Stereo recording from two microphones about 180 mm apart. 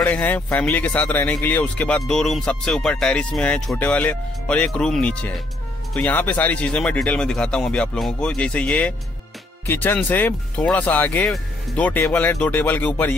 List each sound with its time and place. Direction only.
0.0 s speech: 10° left (ahead or behind)